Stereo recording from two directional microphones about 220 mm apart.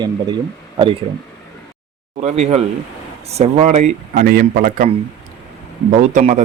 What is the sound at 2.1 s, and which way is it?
A man's voice, 30° right (ahead or behind).